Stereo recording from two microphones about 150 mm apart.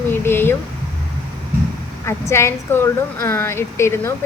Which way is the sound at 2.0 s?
20° left (ahead or behind).